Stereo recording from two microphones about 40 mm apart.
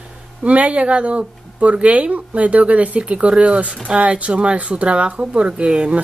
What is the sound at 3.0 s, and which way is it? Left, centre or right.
Speech, right.